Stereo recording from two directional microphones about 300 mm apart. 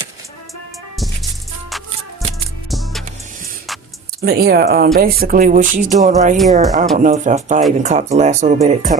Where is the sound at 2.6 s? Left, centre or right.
Centre.